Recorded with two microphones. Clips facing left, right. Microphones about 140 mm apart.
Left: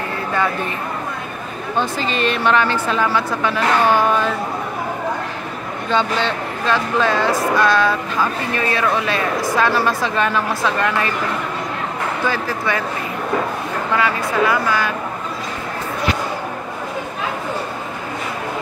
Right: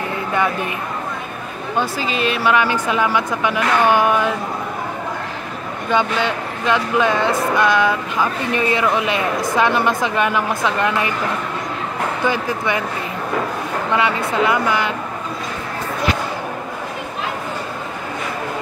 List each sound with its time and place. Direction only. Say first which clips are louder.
1.8 s speech: even; 10° right (ahead or behind)
5.9 s speech: right 1 dB; 15° right (ahead or behind)
12.3 s speech: right 2 dB; 20° right (ahead or behind)
13.9 s speech: even; 20° right (ahead or behind)